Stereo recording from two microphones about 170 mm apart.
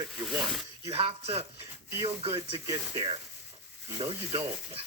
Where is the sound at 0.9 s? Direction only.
35° right (ahead or behind).